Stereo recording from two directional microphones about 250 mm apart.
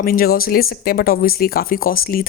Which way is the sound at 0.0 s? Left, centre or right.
Left.